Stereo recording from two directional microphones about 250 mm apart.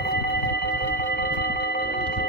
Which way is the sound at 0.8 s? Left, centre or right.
Left.